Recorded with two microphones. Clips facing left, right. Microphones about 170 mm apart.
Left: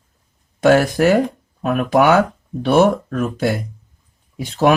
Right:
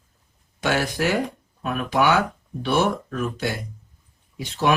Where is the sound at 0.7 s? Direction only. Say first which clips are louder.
Left 10 dB; 50° left (ahead or behind).